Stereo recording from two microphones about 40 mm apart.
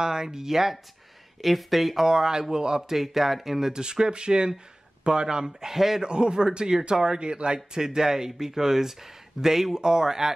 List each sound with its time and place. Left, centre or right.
0.0 s speech: centre
2.0 s speech: centre
3.0 s speech: centre
6.0 s speech: right